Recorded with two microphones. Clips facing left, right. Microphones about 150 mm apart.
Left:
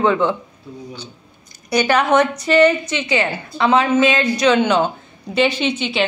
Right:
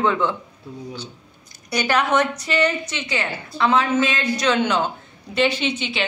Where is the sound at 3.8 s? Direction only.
90° left.